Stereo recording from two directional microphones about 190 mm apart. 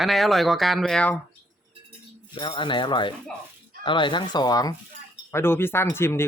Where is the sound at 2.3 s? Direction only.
25° left (ahead or behind).